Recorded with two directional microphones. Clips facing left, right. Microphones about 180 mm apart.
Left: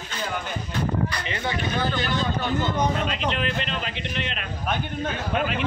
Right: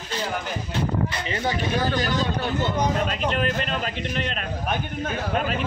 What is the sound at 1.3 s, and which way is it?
Speech, 40° right (ahead or behind).